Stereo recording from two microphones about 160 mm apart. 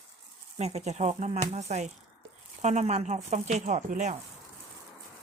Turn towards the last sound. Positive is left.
turn(degrees=-50)  # may be behind; listen again after turning